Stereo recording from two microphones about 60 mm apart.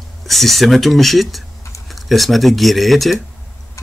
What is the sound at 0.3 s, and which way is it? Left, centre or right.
Speech, centre.